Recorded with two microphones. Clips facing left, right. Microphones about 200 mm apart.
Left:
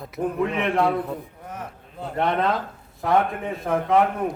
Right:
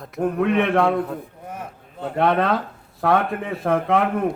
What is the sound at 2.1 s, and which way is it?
A man's voice, 65° right (ahead or behind).